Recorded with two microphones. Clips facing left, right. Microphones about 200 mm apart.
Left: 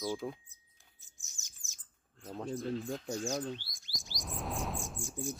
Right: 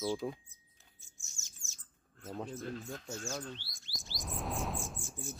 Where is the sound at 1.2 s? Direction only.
15° left (ahead or behind).